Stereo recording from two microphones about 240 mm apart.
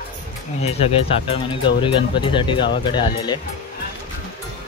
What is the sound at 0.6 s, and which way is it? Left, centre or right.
Speech, left.